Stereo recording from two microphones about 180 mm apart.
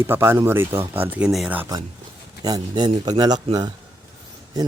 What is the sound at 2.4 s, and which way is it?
Speech, 20° right (ahead or behind).